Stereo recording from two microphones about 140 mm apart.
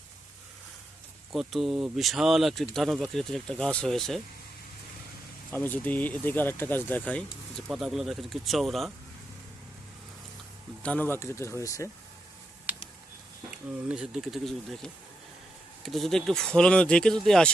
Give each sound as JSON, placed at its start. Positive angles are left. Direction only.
{"t": 1.3, "sound": "speech", "side_deg": 0}
{"t": 5.5, "sound": "speech", "side_deg": 10}
{"t": 7.7, "sound": "speech", "side_deg": 0}
{"t": 10.8, "sound": "speech", "side_deg": 10}
{"t": 12.7, "sound": "a sound", "side_deg": -10}
{"t": 13.5, "sound": "speech", "side_deg": -5}